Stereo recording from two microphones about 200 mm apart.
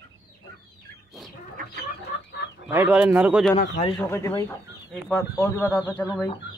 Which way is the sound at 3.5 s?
30° left (ahead or behind).